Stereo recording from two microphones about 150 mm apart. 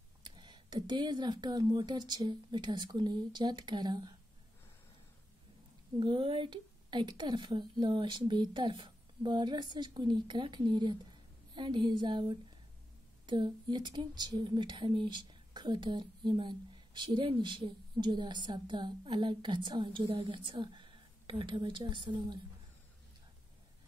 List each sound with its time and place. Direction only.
0.2 s speech: 30° right (ahead or behind)
5.9 s speech: 35° right (ahead or behind)